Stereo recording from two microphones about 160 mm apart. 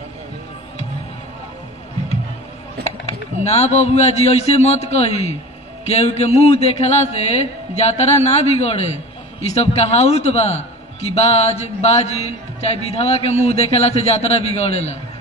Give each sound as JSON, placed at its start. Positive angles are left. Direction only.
{"t": 2.8, "sound": "a man's voice", "side_deg": 40}